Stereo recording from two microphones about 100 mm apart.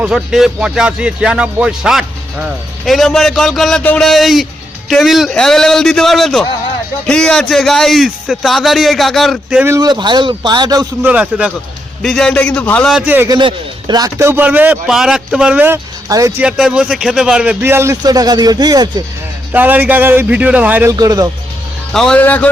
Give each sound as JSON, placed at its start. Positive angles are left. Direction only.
{"t": 0.0, "sound": "speech", "side_deg": -5}
{"t": 9.8, "sound": "speech", "side_deg": -50}
{"t": 11.0, "sound": "a man's voice", "side_deg": -15}
{"t": 12.0, "sound": "a man's voice", "side_deg": 5}
{"t": 13.4, "sound": "speech", "side_deg": -45}
{"t": 14.2, "sound": "a man's voice", "side_deg": -25}
{"t": 14.8, "sound": "speech", "side_deg": -5}
{"t": 16.0, "sound": "speech", "side_deg": -35}
{"t": 16.4, "sound": "a man's voice", "side_deg": -5}
{"t": 18.0, "sound": "speech", "side_deg": -40}
{"t": 19.5, "sound": "a man's voice", "side_deg": -20}
{"t": 20.9, "sound": "speech", "side_deg": -40}
{"t": 21.9, "sound": "a man's voice", "side_deg": 5}